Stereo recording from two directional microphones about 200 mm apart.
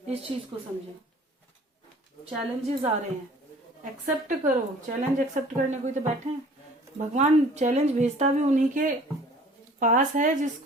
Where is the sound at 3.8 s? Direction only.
40° right (ahead or behind).